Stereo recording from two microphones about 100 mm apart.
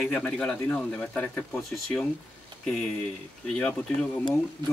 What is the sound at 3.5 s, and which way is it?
Speech, 10° left (ahead or behind).